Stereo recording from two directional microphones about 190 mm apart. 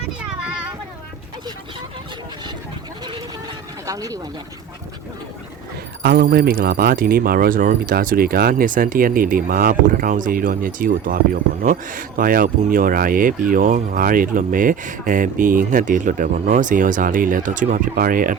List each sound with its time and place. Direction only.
3.8 s speech: 20° right (ahead or behind)
6.0 s speech: 50° right (ahead or behind)